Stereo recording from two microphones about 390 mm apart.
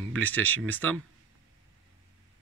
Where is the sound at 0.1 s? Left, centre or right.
Centre.